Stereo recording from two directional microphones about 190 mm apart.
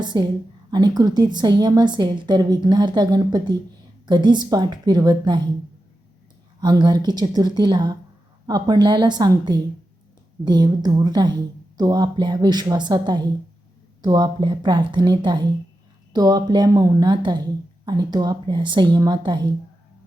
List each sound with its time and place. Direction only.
0.0 s a woman's voice: 25° right (ahead or behind)
6.6 s a woman's voice: 20° right (ahead or behind)